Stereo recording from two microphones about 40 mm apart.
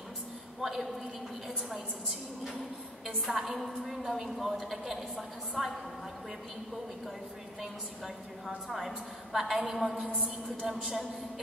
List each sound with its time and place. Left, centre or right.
0.6 s a woman's voice: centre
8.5 s a woman's voice: centre
10.1 s a woman's voice: right
10.7 s a man's voice: centre